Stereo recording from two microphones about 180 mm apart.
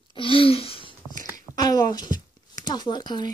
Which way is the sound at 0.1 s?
30° left (ahead or behind).